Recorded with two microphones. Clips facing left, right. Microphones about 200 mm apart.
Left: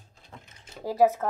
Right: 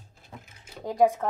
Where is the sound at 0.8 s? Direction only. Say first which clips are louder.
Even; 5° left (ahead or behind).